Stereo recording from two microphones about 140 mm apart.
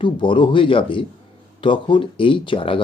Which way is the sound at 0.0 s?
35° left (ahead or behind).